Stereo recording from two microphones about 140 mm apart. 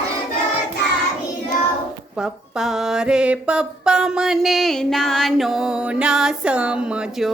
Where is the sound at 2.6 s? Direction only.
5° right (ahead or behind).